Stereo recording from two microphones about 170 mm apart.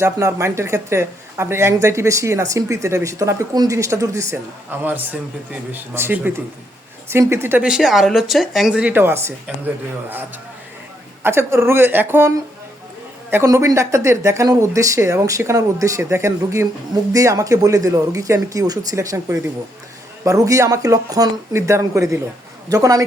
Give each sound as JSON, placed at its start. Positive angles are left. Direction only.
{"t": 0.0, "sound": "speech", "side_deg": -15}
{"t": 13.3, "sound": "speech", "side_deg": -15}